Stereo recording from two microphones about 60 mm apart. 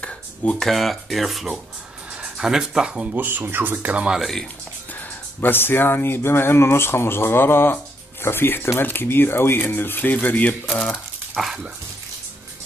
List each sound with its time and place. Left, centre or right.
0.0 s a sound: centre
0.6 s speech: centre
3.2 s speech: right
4.2 s speech: centre
5.4 s speech: left; by 11.0 s centre
11.4 s speech: centre